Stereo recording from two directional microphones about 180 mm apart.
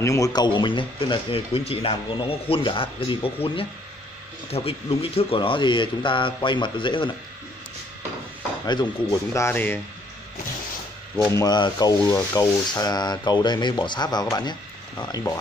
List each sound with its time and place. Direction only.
0.0 s speech: 20° left (ahead or behind)
8.6 s speech: 25° left (ahead or behind)
11.3 s speech: 20° left (ahead or behind)